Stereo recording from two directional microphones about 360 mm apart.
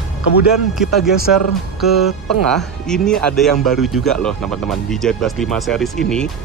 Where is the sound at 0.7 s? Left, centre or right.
Centre.